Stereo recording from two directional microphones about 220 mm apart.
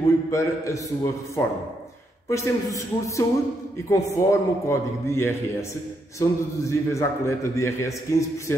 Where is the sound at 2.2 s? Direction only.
15° left (ahead or behind).